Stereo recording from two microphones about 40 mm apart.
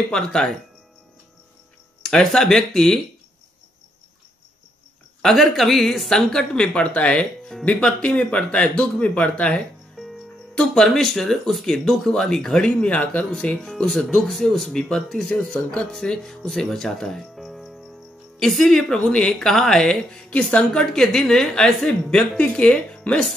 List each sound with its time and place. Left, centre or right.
0.1 s speech: centre
2.0 s speech: centre
5.2 s a woman's voice: centre
6.0 s a man's voice: centre; by 9.3 s left
9.9 s music: centre
10.5 s speech: centre
12.8 s speech: left; by 15.2 s centre
15.2 s speech: left
15.9 s speech: centre
17.4 s cricket: centre
18.4 s speech: centre
20.2 s speech: left